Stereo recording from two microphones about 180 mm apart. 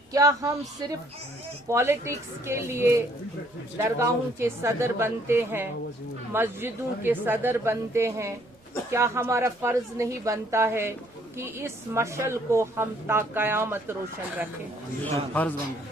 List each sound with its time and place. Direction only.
0.1 s speech: 20° right (ahead or behind)
1.7 s speech: 15° right (ahead or behind)
15.1 s a man's voice: 10° left (ahead or behind)